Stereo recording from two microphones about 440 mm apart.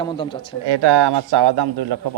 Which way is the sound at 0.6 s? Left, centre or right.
Right.